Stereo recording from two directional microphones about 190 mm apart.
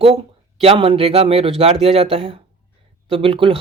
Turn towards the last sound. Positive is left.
turn(degrees=-30)  # may be behind; listen again after turning